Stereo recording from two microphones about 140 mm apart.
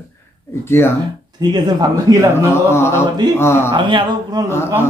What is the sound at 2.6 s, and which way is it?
Speech, 20° left (ahead or behind).